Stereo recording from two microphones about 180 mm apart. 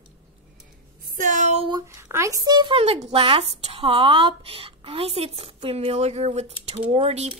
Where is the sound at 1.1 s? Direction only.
45° right (ahead or behind).